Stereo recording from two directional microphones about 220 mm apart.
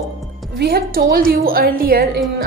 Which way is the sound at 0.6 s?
45° right (ahead or behind).